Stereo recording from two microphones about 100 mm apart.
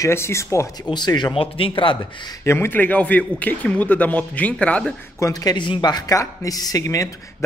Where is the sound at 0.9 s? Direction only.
45° left (ahead or behind).